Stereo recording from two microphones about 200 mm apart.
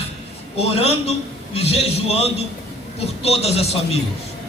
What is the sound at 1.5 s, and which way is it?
A man's voice, 30° left (ahead or behind).